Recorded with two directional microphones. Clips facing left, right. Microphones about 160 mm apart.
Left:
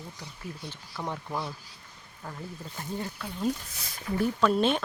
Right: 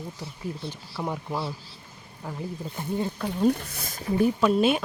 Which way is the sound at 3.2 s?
65° right (ahead or behind).